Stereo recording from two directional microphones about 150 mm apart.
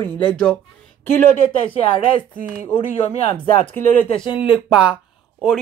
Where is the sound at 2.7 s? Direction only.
45° left (ahead or behind).